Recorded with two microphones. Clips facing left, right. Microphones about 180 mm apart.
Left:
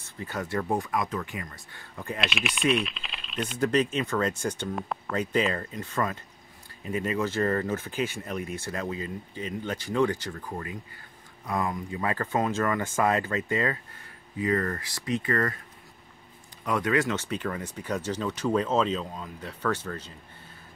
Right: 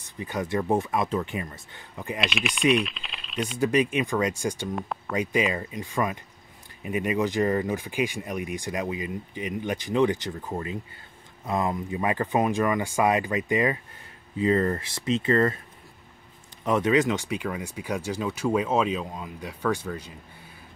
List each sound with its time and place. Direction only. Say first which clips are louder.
0.0 s speech: right 3 dB; 15° right (ahead or behind)
2.1 s speech: right 2 dB; centre (ahead or behind)
3.5 s speech: right 2 dB; 10° right (ahead or behind)
4.7 s speech: right 1 dB; centre (ahead or behind)
5.1 s speech: right 1 dB; 10° right (ahead or behind)
16.6 s speech: right 4 dB; 20° right (ahead or behind)